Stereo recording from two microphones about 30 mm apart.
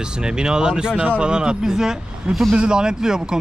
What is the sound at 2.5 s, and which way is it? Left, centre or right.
Speech, right.